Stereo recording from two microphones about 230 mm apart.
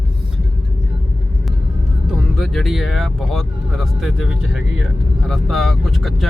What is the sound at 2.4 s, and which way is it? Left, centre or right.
Speech, centre.